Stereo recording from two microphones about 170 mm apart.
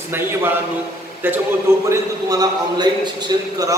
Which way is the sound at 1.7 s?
15° right (ahead or behind).